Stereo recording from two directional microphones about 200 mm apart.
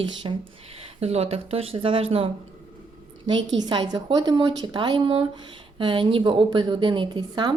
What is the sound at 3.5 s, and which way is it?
A woman's voice, 20° right (ahead or behind).